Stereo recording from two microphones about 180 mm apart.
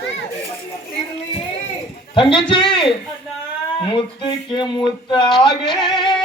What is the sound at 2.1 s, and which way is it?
Speech, 30° left (ahead or behind).